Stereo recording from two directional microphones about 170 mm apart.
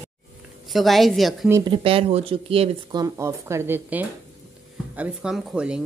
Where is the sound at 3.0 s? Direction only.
20° right (ahead or behind).